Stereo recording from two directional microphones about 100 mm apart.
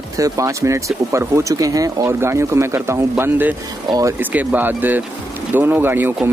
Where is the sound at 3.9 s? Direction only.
35° right (ahead or behind).